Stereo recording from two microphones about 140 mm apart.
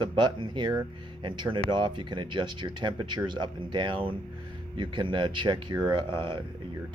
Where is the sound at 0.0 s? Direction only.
35° right (ahead or behind).